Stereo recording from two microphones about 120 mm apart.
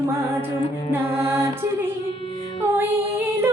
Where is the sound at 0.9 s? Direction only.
20° right (ahead or behind).